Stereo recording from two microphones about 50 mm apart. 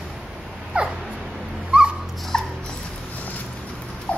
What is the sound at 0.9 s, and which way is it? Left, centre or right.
Dog, centre.